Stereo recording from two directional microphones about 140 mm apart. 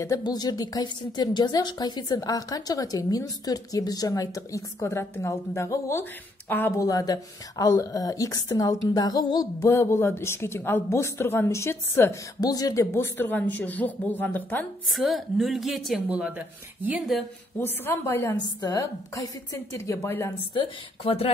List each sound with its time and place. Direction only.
0.0 s a woman's voice: 25° left (ahead or behind)
14.9 s a woman's voice: centre (ahead or behind)
17.6 s a woman's voice: 15° left (ahead or behind)
20.5 s speech: 40° left (ahead or behind)